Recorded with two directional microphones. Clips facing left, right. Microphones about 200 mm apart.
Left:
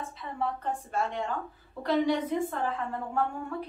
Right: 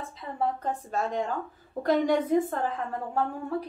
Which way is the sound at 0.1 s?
40° right (ahead or behind).